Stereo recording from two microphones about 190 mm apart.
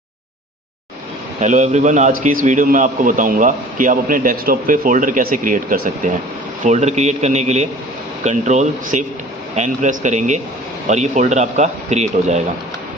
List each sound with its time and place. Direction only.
1.4 s a man's voice: 40° right (ahead or behind)